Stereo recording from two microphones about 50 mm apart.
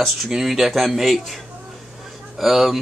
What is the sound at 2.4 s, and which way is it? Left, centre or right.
Speech, centre.